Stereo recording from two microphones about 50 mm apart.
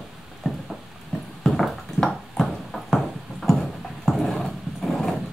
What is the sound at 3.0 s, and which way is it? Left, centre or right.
Music, centre.